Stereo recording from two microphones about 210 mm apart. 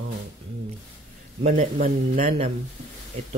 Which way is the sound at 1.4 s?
35° right (ahead or behind).